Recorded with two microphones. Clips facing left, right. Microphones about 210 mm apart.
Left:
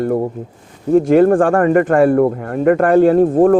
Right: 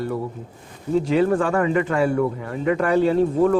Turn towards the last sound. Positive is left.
turn(degrees=50)  # may be behind; listen again after turning